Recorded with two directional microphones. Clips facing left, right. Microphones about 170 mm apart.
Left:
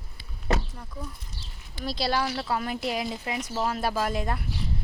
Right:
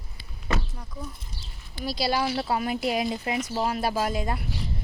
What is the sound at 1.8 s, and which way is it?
Speech, 5° right (ahead or behind).